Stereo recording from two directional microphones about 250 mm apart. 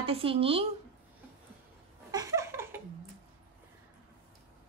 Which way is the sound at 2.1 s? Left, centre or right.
Centre.